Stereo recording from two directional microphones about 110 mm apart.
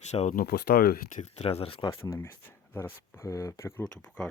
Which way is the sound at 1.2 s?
65° left (ahead or behind).